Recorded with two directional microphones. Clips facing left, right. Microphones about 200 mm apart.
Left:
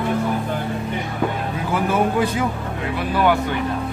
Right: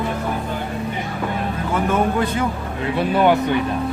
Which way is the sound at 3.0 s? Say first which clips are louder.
Right 3 dB; 25° right (ahead or behind).